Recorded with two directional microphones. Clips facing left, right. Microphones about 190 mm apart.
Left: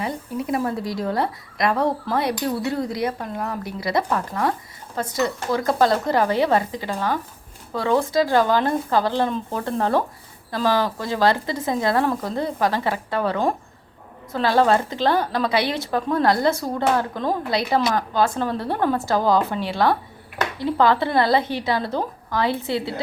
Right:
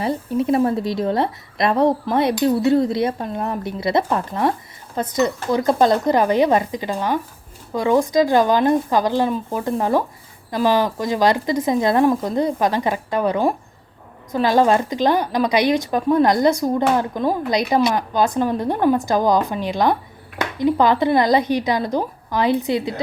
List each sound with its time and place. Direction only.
0.0 s speech: 25° right (ahead or behind)